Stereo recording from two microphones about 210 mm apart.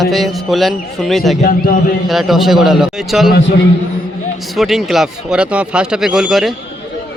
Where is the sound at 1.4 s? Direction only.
45° left (ahead or behind).